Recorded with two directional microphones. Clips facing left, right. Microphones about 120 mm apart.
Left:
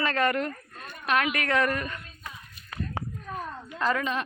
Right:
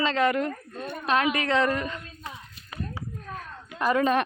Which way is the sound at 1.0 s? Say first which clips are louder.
Right 2 dB; 30° right (ahead or behind).